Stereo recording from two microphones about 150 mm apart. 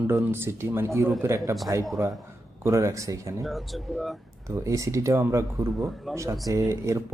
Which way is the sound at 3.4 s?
Centre (ahead or behind).